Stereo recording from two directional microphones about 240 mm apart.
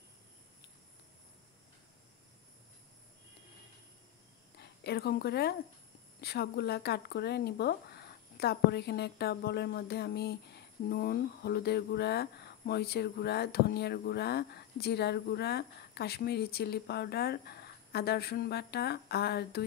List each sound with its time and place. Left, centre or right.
4.6 s speech: left